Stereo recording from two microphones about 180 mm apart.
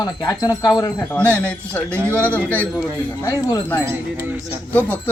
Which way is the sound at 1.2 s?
10° left (ahead or behind).